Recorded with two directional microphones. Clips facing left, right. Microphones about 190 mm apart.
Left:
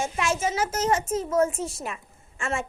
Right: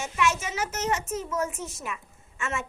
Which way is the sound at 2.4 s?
30° left (ahead or behind).